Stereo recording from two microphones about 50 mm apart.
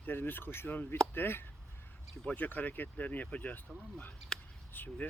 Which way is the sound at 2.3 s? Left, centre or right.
Left.